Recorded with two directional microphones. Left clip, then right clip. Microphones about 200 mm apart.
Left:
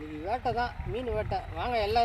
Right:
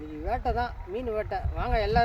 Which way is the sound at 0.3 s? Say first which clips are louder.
Right 1 dB; 15° right (ahead or behind).